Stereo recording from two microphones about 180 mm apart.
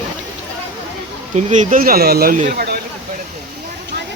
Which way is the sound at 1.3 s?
40° right (ahead or behind).